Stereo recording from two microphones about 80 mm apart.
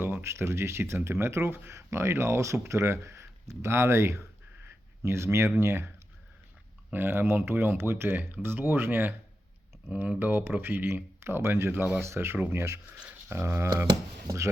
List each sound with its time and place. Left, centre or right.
0.0 s speech: right
6.9 s speech: right